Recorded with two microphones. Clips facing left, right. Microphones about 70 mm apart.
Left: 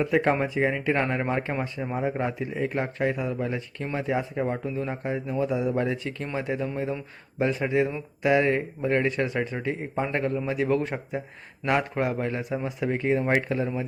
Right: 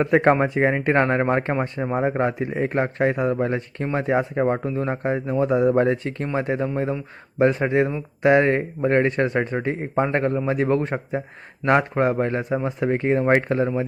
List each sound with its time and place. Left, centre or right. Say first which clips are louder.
0.0 s speech: right 6 dB; right